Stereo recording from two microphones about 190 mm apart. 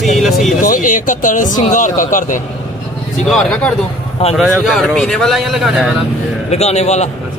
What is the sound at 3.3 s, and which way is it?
Speech, 5° left (ahead or behind).